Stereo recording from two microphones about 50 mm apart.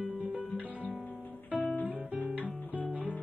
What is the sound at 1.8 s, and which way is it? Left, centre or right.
Guitar, right.